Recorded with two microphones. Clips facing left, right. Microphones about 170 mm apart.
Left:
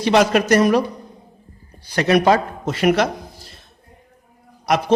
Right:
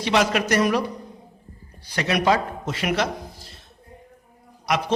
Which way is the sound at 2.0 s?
50° left (ahead or behind).